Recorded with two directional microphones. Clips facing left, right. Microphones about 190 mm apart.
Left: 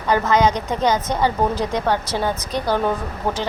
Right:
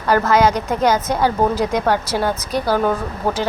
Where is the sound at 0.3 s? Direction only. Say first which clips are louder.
Right 2 dB; 5° right (ahead or behind).